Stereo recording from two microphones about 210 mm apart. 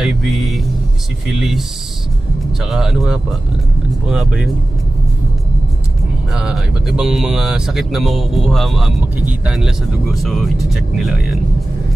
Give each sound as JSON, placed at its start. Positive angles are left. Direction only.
{"t": 0.0, "sound": "speech", "side_deg": 0}
{"t": 2.6, "sound": "speech", "side_deg": 0}
{"t": 6.3, "sound": "speech", "side_deg": 0}